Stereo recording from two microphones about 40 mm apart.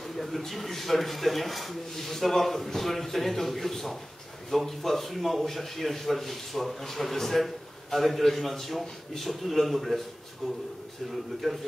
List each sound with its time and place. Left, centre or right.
0.0 s a man's voice: centre